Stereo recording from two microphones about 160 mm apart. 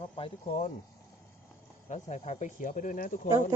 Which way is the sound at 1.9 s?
45° left (ahead or behind).